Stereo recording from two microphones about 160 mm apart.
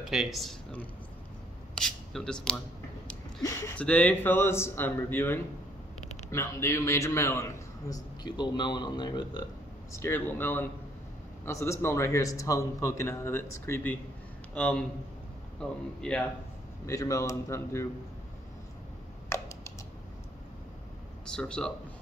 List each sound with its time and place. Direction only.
0.1 s a man's voice: centre (ahead or behind); by 9.5 s 25° left (ahead or behind)
9.9 s a man's voice: 15° left (ahead or behind)
16.8 s a man's voice: 20° left (ahead or behind)
19.2 s typing: 20° left (ahead or behind)
21.4 s speech: 5° left (ahead or behind)